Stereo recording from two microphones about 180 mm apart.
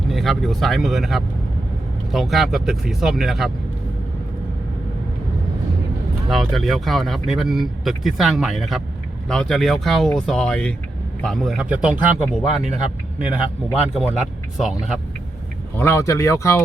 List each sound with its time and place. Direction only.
0.1 s speech: centre (ahead or behind)
6.2 s a man's voice: centre (ahead or behind)
15.8 s speech: 15° left (ahead or behind)